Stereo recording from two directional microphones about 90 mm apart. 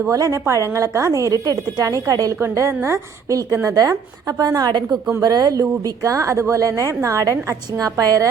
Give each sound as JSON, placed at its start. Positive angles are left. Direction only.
{"t": 0.1, "sound": "a woman's voice", "side_deg": -35}